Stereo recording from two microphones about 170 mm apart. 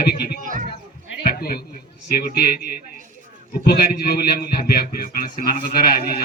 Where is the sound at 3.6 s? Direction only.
65° left (ahead or behind).